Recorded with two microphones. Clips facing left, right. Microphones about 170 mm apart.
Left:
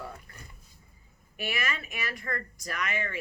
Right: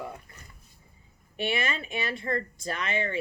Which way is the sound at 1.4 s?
30° right (ahead or behind).